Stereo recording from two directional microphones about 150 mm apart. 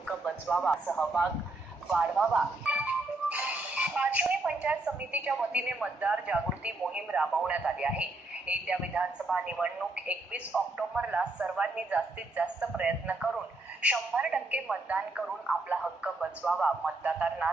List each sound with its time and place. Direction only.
0.1 s a man's voice: centre (ahead or behind)
1.9 s speech: 5° right (ahead or behind)